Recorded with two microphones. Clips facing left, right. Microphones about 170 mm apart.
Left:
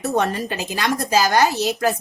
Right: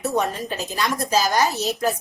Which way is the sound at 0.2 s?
75° left (ahead or behind).